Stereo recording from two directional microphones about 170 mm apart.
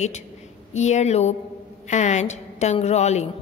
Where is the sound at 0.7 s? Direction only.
40° left (ahead or behind).